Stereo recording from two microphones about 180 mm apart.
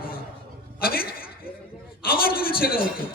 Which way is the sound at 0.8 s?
55° left (ahead or behind).